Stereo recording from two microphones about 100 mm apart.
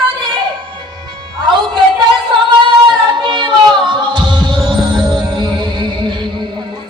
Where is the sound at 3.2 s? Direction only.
50° right (ahead or behind).